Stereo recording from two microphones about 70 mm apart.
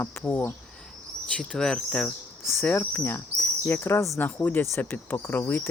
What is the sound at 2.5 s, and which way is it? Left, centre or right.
Speech, left.